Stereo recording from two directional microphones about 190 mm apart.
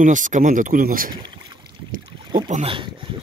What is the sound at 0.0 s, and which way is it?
Speech, 40° right (ahead or behind).